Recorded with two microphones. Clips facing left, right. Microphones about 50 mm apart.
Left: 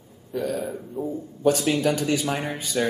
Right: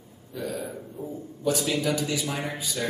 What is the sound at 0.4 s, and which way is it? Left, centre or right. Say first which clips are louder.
A man's voice: left 5 dB; left.